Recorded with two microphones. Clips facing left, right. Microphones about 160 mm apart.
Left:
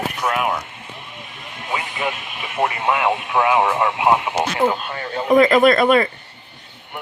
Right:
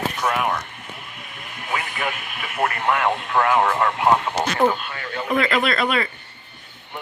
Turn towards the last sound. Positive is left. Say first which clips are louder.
# left 8 dB
turn(degrees=45)  # may be behind; listen again after turning